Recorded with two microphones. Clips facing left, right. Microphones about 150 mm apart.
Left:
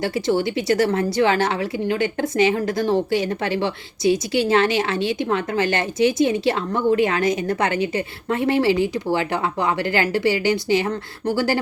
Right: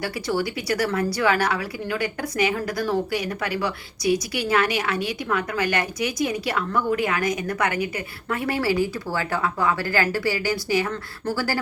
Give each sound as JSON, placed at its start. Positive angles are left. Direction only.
{"t": 0.0, "sound": "a woman's voice", "side_deg": 25}